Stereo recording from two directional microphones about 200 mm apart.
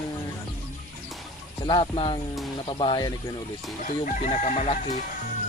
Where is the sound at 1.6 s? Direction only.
25° left (ahead or behind).